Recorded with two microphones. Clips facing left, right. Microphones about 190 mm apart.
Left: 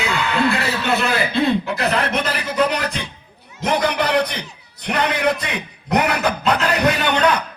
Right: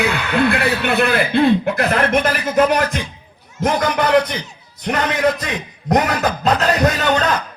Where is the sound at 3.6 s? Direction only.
65° left (ahead or behind).